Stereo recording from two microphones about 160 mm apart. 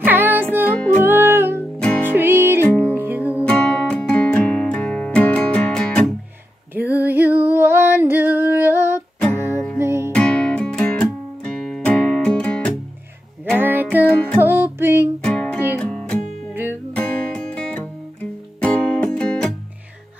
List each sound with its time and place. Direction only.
0.0 s music: 10° right (ahead or behind)
1.8 s music: 10° left (ahead or behind)
2.0 s music: 15° right (ahead or behind)
2.6 s music: 10° left (ahead or behind)
2.9 s music: 10° right (ahead or behind)
3.4 s music: 10° left (ahead or behind)
6.7 s female singing: 10° right (ahead or behind)
9.8 s music: 15° right (ahead or behind)
10.1 s music: 5° left (ahead or behind)
13.6 s music: 10° right (ahead or behind)
15.2 s music: 10° left (ahead or behind)